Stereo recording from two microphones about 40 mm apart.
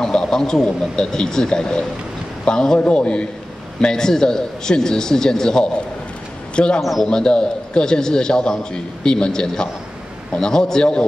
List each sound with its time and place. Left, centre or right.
0.0 s a man's voice: centre
2.8 s a man's voice: left
3.8 s a man's voice: centre
6.5 s a man's voice: left
6.8 s speech: centre
7.1 s a man's voice: left